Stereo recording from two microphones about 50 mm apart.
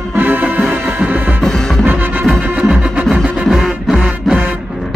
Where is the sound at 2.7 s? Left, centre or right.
Centre.